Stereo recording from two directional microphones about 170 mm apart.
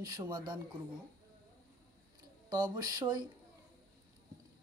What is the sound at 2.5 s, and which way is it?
Speech, 25° right (ahead or behind).